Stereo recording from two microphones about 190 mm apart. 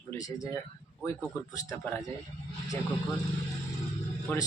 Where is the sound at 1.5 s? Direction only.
10° left (ahead or behind).